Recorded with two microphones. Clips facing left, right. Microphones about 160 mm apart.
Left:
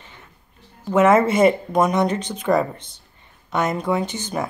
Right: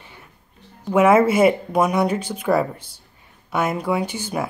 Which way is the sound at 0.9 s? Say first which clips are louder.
Right 1 dB; 10° right (ahead or behind).